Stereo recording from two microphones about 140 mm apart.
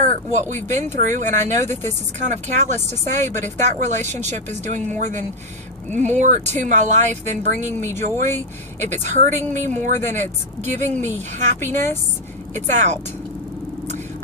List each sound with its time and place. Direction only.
0.0 s speech: 55° right (ahead or behind)
7.8 s speech: 20° left (ahead or behind)
8.0 s speech: 60° right (ahead or behind)